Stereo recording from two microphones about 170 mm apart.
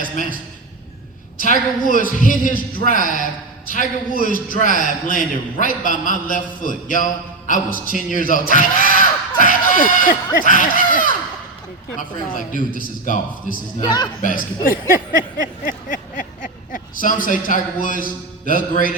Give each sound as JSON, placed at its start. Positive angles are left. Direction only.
{"t": 1.4, "sound": "a man's voice", "side_deg": 50}
{"t": 8.9, "sound": "a sound", "side_deg": 50}
{"t": 11.9, "sound": "a man's voice", "side_deg": 50}
{"t": 13.8, "sound": "speech", "side_deg": 25}
{"t": 14.2, "sound": "a man's voice", "side_deg": 55}
{"t": 15.9, "sound": "speech", "side_deg": 50}